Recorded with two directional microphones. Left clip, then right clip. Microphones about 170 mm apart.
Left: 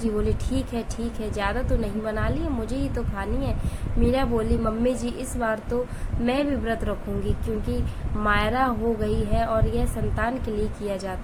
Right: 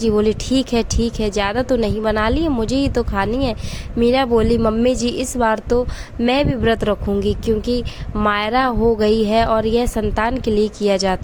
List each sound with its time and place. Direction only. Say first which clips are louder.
0.0 s speech: right 10 dB; 55° right (ahead or behind)